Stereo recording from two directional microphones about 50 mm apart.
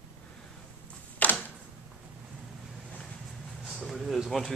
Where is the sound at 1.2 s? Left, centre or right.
Left.